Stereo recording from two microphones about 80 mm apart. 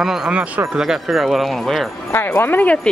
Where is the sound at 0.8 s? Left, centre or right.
Centre.